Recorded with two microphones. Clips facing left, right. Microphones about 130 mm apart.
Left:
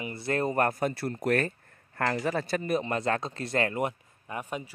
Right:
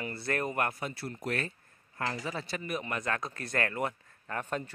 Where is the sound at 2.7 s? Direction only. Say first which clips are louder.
Left 5 dB; 30° left (ahead or behind).